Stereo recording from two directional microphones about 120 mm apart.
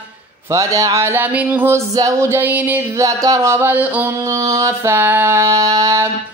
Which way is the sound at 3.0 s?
30° right (ahead or behind).